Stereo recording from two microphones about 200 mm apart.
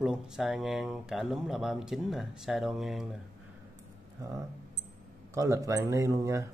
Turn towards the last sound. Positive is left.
turn(degrees=-15)  # may be behind; listen again after turning